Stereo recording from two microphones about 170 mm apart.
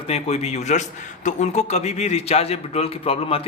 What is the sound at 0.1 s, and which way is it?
A man's voice, 40° left (ahead or behind).